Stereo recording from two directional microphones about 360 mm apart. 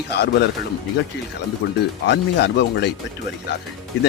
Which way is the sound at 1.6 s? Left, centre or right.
Left.